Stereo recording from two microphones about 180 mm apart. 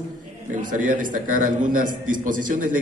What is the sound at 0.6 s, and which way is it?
A man's voice, 45° right (ahead or behind).